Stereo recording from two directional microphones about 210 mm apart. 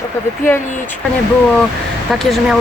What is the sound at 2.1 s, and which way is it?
Speech, centre (ahead or behind).